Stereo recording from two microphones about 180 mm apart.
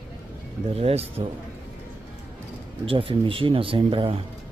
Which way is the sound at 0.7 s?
35° right (ahead or behind).